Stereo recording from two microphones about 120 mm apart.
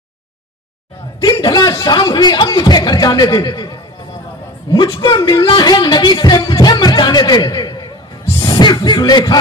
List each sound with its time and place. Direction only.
1.2 s speech: 35° left (ahead or behind)
8.4 s music: 35° left (ahead or behind)